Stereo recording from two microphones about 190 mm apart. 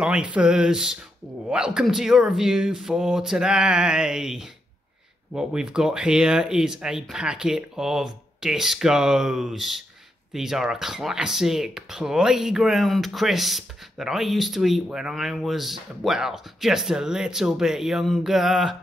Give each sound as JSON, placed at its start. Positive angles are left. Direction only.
{"t": 0.0, "sound": "speech", "side_deg": -5}